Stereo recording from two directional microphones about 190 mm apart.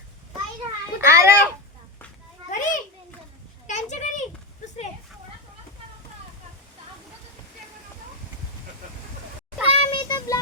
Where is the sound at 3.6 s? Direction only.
40° left (ahead or behind).